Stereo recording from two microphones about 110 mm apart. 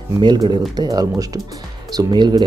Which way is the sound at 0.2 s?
40° right (ahead or behind).